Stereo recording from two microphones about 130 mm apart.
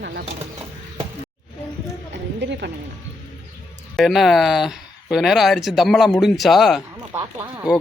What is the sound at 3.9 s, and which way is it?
A man's voice, centre (ahead or behind).